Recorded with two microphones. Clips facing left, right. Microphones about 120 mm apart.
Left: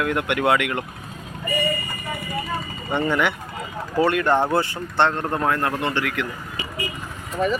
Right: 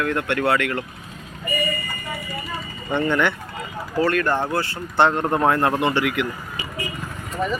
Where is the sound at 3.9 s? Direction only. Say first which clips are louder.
Left 2 dB; 20° left (ahead or behind).